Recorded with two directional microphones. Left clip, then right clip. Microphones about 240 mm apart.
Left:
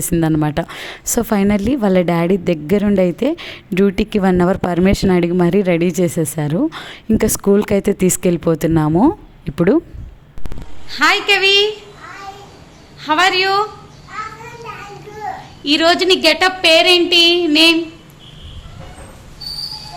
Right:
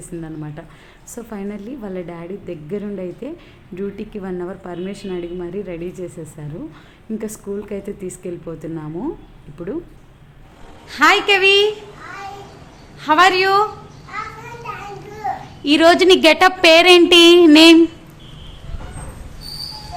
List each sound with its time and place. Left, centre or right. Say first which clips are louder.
0.0 s a woman's voice: left 14 dB; left
10.8 s a woman's voice: even; centre
13.0 s a woman's voice: right 1 dB; centre
15.6 s a woman's voice: right 2 dB; centre